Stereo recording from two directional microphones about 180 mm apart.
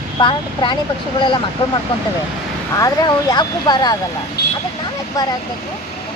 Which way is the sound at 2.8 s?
20° left (ahead or behind).